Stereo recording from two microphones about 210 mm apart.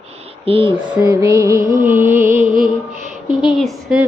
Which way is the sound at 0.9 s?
15° right (ahead or behind).